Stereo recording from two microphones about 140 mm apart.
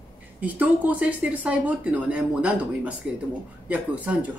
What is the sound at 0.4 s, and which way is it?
Speech, 10° right (ahead or behind).